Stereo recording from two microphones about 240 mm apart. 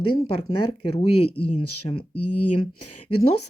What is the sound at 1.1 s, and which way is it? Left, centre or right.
Speech, left.